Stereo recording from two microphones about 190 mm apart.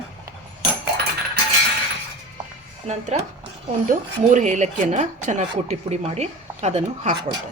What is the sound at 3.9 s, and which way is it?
Speech, 40° right (ahead or behind).